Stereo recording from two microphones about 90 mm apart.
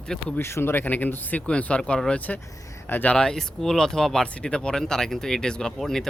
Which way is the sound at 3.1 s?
5° left (ahead or behind).